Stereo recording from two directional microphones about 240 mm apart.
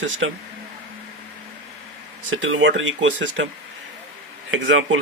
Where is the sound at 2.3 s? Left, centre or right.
Right.